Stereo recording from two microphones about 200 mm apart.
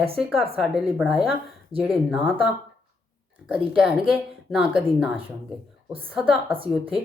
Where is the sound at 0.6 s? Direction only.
Centre (ahead or behind).